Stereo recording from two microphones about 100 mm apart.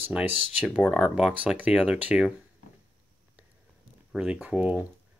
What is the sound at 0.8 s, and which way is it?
Speech, 5° left (ahead or behind).